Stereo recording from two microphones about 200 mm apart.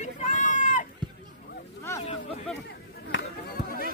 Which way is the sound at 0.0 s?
40° left (ahead or behind).